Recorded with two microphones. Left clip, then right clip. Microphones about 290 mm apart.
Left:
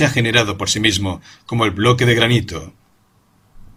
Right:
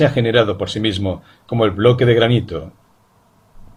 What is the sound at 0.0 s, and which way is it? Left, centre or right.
Speech, left.